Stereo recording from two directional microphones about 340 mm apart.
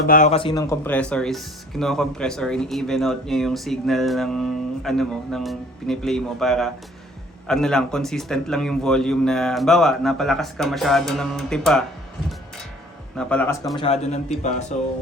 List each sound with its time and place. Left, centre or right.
0.1 s speech: left; by 11.9 s centre
13.1 s a man's voice: centre; by 14.9 s left